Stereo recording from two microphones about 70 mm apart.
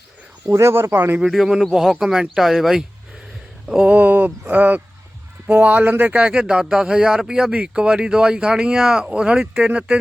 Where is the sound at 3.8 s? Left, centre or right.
Right.